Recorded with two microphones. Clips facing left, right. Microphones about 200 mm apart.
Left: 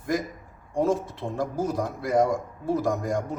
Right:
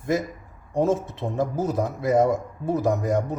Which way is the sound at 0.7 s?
20° right (ahead or behind).